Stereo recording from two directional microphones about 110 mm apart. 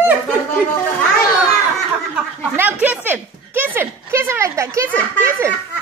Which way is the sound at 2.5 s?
15° right (ahead or behind).